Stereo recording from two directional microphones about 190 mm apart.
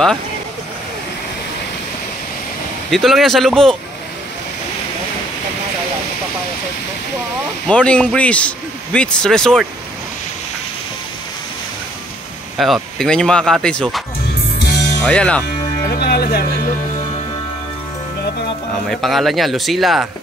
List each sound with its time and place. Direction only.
2.9 s a man's voice: centre (ahead or behind)
7.6 s a man's voice: 5° left (ahead or behind)
12.5 s a man's voice: centre (ahead or behind)
15.9 s speech: 55° left (ahead or behind)
18.9 s a man's voice: centre (ahead or behind)